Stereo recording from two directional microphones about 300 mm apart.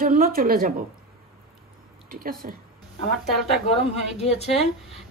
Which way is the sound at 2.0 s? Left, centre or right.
Right.